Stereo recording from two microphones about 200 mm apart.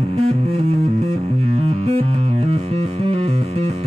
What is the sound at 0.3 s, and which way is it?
Music, 30° right (ahead or behind).